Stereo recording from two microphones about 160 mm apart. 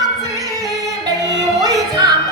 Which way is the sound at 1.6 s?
20° right (ahead or behind).